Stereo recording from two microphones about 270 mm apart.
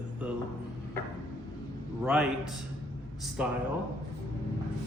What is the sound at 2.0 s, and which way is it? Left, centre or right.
Speech, centre.